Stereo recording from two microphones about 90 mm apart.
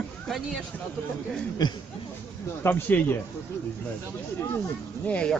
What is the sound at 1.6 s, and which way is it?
Speech, 50° left (ahead or behind).